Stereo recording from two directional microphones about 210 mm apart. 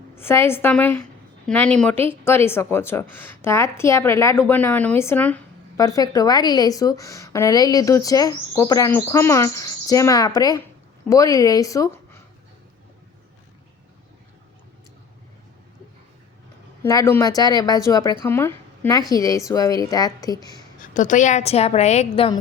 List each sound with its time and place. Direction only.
0.2 s speech: 10° left (ahead or behind)
16.8 s speech: 15° left (ahead or behind)
20.9 s a woman's voice: 35° left (ahead or behind)